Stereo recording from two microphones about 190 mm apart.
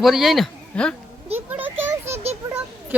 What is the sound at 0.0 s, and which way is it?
Speech, centre (ahead or behind).